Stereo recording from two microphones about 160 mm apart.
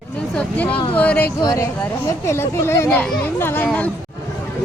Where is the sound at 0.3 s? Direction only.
10° left (ahead or behind).